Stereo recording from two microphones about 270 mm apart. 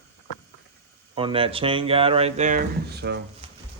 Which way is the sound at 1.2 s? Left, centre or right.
Centre.